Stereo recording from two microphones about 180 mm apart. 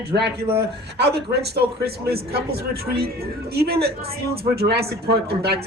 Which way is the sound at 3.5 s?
60° right (ahead or behind).